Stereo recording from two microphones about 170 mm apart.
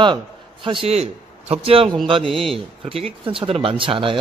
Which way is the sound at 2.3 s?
Centre (ahead or behind).